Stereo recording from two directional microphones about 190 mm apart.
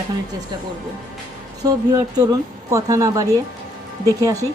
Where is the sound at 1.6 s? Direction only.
20° right (ahead or behind).